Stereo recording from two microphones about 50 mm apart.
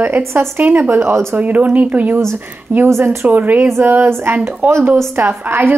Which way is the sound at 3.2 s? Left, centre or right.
Right.